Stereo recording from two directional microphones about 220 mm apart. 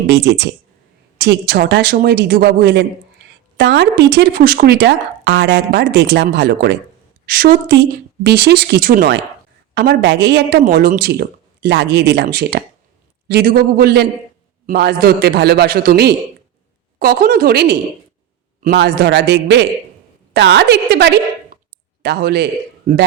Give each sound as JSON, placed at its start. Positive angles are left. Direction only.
{"t": 0.1, "sound": "speech", "side_deg": -50}
{"t": 3.2, "sound": "a sound", "side_deg": -50}
{"t": 3.6, "sound": "a woman's voice", "side_deg": -50}